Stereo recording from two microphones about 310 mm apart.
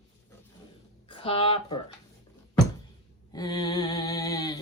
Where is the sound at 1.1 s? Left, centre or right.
Centre.